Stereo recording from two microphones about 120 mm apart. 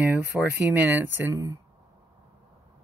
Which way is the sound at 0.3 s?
5° right (ahead or behind).